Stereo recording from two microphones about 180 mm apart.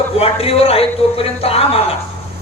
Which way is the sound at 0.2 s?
35° left (ahead or behind).